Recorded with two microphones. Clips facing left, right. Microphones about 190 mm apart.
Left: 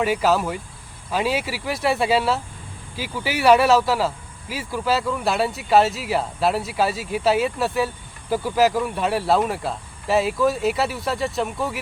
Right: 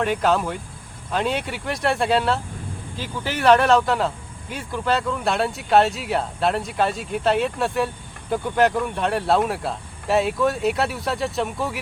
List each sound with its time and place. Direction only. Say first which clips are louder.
0.0 s speech: left 1 dB; 5° left (ahead or behind)